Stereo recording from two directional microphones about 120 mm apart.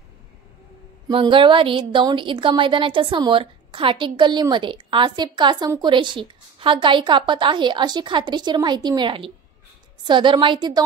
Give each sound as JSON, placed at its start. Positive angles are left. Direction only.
{"t": 1.1, "sound": "a woman's voice", "side_deg": -45}